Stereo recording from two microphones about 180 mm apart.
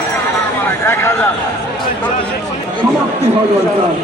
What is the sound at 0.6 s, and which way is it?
Speech, 15° left (ahead or behind).